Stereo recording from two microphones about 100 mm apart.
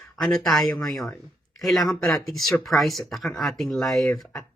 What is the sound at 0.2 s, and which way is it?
Speech, 5° left (ahead or behind).